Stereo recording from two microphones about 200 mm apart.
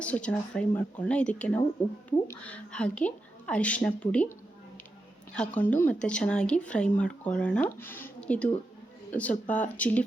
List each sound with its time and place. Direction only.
0.0 s a woman's voice: 5° left (ahead or behind)
5.3 s a woman's voice: 5° left (ahead or behind)